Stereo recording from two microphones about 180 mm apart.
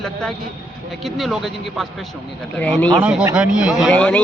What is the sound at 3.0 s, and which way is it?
Speech, 10° right (ahead or behind).